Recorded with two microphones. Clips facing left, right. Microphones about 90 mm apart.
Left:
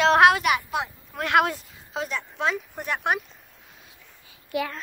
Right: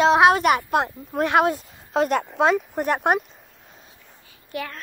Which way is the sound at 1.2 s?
25° right (ahead or behind).